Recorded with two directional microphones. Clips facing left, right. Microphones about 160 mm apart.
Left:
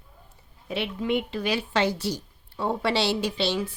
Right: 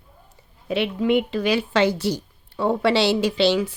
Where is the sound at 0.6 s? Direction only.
90° right; by 2.2 s 70° right (ahead or behind).